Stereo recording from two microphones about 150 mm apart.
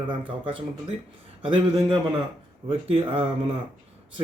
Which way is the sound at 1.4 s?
35° right (ahead or behind).